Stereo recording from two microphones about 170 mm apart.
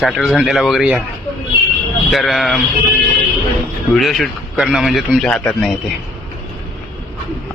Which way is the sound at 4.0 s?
Centre (ahead or behind).